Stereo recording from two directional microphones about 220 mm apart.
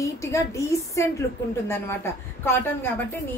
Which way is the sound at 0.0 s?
15° left (ahead or behind).